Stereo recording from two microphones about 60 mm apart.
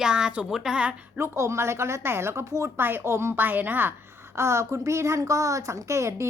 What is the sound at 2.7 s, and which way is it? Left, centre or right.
A woman's voice, right.